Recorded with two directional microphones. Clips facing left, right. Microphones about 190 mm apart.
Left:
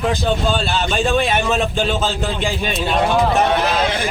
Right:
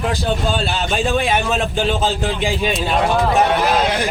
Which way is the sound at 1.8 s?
15° right (ahead or behind).